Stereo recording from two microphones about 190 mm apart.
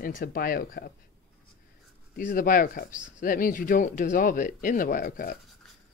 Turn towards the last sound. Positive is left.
turn(degrees=45)  # may be behind; listen again after turning